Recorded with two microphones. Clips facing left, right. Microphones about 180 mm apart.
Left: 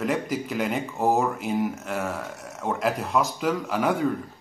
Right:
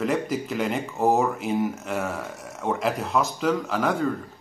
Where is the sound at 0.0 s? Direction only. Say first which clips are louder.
Right 1 dB; centre (ahead or behind).